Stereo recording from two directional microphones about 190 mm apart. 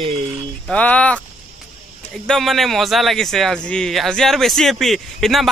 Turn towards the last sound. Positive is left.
turn(degrees=0)  # may be behind; listen again after turning